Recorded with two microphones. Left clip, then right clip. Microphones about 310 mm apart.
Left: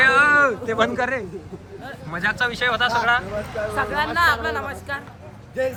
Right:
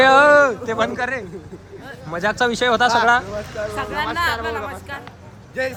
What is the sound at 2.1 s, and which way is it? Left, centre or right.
Speech, centre.